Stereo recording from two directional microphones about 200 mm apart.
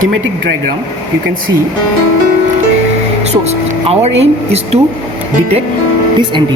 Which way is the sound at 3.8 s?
30° right (ahead or behind).